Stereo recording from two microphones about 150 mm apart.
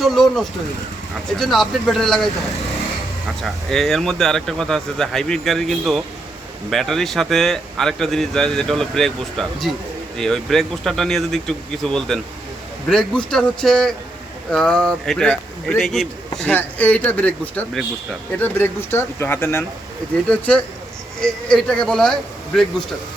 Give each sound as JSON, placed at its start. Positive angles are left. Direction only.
{"t": 0.0, "sound": "speech", "side_deg": 0}
{"t": 3.4, "sound": "speech", "side_deg": 0}